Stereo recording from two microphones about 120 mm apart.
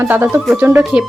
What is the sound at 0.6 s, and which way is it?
Music, 20° right (ahead or behind).